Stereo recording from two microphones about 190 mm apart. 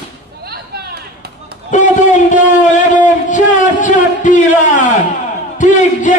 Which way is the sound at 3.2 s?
40° left (ahead or behind).